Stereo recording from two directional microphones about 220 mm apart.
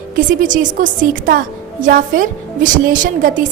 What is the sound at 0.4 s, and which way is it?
A woman's voice, 35° right (ahead or behind).